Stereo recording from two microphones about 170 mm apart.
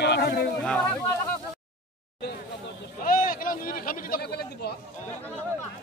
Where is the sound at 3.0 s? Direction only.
55° left (ahead or behind).